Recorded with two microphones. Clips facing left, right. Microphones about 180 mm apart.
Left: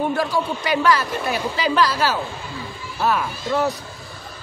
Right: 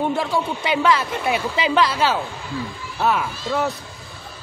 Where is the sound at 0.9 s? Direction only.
20° right (ahead or behind).